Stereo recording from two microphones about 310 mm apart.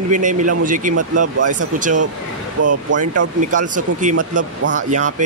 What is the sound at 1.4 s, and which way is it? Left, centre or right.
Speech, right.